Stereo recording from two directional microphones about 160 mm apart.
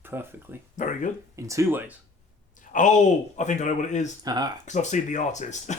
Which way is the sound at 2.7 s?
50° left (ahead or behind).